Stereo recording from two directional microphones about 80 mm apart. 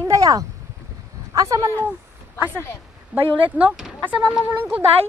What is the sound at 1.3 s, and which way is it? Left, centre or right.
Speech, right.